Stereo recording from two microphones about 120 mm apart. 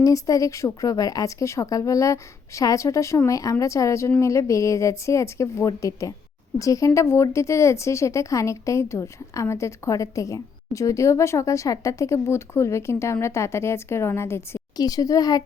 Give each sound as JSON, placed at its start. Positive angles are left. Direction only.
{"t": 0.0, "sound": "speech", "side_deg": 30}
{"t": 14.8, "sound": "speech", "side_deg": 30}